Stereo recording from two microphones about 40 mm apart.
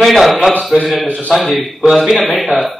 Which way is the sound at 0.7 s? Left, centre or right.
Centre.